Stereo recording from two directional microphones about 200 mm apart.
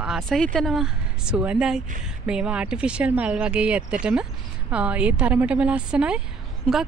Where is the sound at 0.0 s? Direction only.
Centre (ahead or behind).